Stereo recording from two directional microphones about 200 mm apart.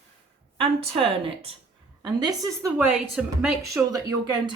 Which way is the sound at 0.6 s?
25° right (ahead or behind).